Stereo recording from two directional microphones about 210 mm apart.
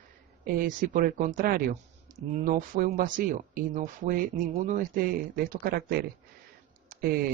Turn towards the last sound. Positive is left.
turn(degrees=-45)  # may be behind; listen again after turning